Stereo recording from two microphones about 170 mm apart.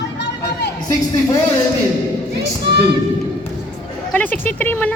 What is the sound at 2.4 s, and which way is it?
Speech, 75° right (ahead or behind).